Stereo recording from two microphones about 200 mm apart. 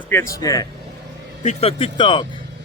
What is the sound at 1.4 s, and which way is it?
Speech, 35° left (ahead or behind).